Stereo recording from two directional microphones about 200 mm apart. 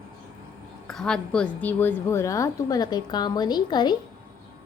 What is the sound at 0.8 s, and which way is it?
A woman's voice, 5° left (ahead or behind).